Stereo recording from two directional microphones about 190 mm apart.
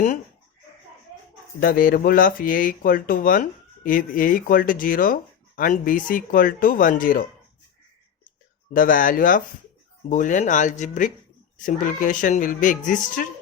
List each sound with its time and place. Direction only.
1.6 s speech: 50° left (ahead or behind)
8.7 s speech: 45° left (ahead or behind)